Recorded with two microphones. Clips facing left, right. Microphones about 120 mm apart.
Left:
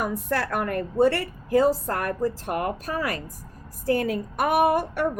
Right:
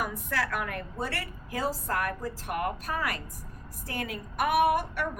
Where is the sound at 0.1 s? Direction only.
50° left (ahead or behind).